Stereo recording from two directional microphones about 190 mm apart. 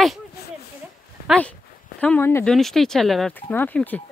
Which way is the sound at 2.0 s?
10° left (ahead or behind).